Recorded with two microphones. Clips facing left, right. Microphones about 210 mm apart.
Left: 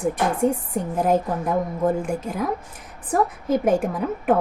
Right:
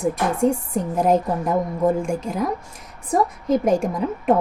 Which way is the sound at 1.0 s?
Centre (ahead or behind).